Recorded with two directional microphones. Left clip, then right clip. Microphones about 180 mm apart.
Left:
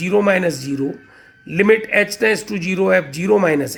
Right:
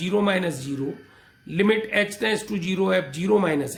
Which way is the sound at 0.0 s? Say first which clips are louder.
Left 7 dB; 20° left (ahead or behind).